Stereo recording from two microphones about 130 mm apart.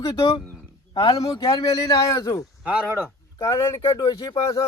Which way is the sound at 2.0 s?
25° left (ahead or behind).